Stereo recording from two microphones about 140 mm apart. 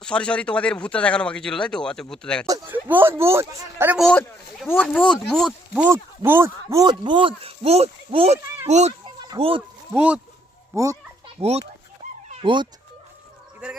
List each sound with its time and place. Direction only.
0.0 s speech: 5° left (ahead or behind)
2.6 s speech: 15° right (ahead or behind)
4.7 s speech: 10° left (ahead or behind)
5.9 s speech: 15° right (ahead or behind)
6.8 s speech: 35° right (ahead or behind); by 8.9 s 50° right (ahead or behind)
9.0 s a sound: 30° right (ahead or behind)
9.9 s speech: 10° right (ahead or behind)
11.3 s speech: 50° right (ahead or behind)
12.3 s speech: 35° right (ahead or behind)